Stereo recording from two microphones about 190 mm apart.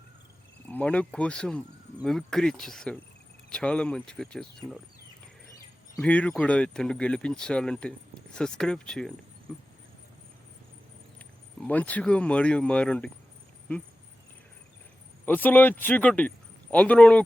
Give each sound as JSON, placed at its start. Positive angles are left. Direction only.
{"t": 0.7, "sound": "speech", "side_deg": 5}
{"t": 6.0, "sound": "speech", "side_deg": 5}
{"t": 11.6, "sound": "speech", "side_deg": 10}
{"t": 15.3, "sound": "speech", "side_deg": 10}